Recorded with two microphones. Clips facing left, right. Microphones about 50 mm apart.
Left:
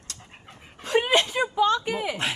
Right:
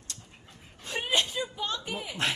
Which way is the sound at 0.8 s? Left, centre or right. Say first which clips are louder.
Left 8 dB; left.